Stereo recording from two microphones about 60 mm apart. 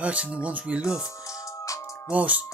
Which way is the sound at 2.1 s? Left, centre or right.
Right.